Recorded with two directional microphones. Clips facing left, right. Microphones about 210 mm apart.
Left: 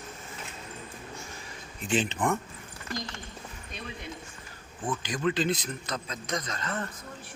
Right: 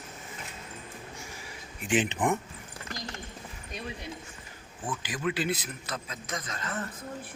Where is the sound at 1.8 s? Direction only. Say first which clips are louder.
Right 1 dB; 15° right (ahead or behind).